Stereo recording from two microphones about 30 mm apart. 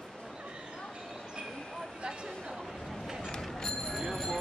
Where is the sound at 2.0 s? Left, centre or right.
Right.